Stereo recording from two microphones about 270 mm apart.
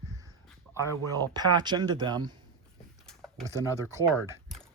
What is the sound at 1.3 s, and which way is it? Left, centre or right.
Speech, centre.